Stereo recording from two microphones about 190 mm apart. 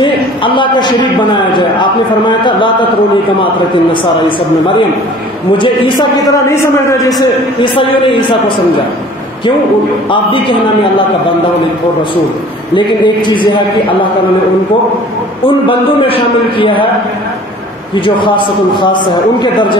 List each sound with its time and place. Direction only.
0.0 s a man's voice: 25° left (ahead or behind)
5.6 s a man's voice: 20° left (ahead or behind)
7.2 s a man's voice: 25° left (ahead or behind)
12.7 s a man's voice: 25° left (ahead or behind)
15.4 s a man's voice: 30° left (ahead or behind)
18.0 s a man's voice: 25° left (ahead or behind)